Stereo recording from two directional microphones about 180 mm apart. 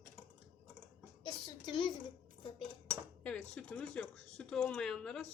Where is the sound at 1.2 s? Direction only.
25° left (ahead or behind).